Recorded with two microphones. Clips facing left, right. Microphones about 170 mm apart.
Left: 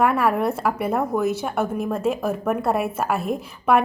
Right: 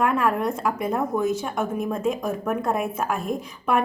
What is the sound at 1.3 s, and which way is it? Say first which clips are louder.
Speech: left 1 dB; 70° left (ahead or behind).